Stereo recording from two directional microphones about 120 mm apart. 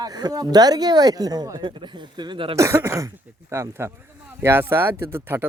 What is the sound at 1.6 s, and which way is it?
Speech, 40° right (ahead or behind).